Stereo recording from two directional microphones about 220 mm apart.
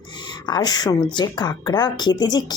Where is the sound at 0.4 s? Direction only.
20° left (ahead or behind).